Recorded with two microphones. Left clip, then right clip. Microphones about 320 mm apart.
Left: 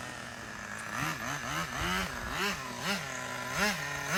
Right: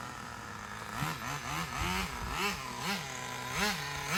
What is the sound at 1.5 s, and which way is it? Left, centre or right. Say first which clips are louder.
Vehicle: left 2 dB; centre.